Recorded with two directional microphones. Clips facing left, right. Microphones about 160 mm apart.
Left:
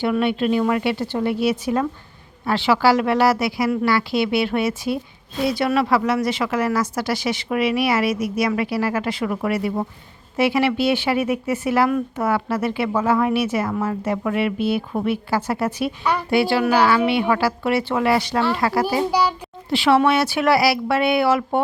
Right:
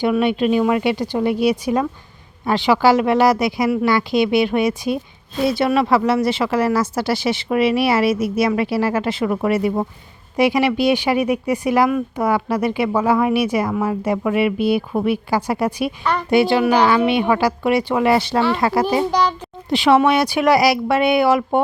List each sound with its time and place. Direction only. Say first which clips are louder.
0.0 s speech: right 3 dB; 15° right (ahead or behind)